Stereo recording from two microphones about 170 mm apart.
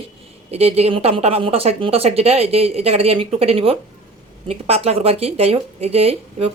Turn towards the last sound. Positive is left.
turn(degrees=-35)  # may be behind; listen again after turning